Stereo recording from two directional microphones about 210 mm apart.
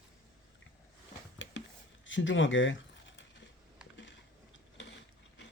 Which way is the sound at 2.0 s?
65° left (ahead or behind).